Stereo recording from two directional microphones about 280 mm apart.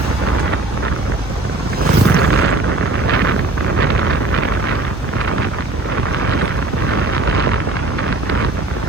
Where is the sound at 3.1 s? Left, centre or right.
Right.